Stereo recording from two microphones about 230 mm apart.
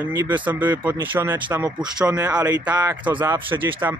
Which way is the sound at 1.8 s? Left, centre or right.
Centre.